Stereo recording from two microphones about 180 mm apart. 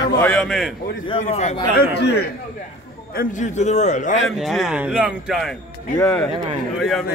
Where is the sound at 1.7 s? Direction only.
60° left (ahead or behind).